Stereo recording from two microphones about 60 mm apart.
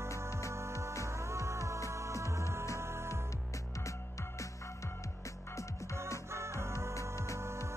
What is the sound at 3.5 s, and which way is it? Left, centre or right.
Music, left.